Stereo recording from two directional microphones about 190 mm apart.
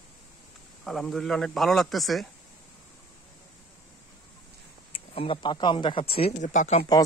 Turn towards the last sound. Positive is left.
turn(degrees=40)  # may be behind; listen again after turning